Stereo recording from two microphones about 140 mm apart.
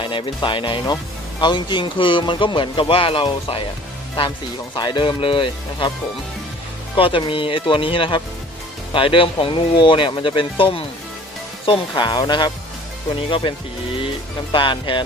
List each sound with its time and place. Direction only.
0.0 s speech: 35° left (ahead or behind)
4.7 s speech: 30° left (ahead or behind)
6.9 s speech: 35° left (ahead or behind)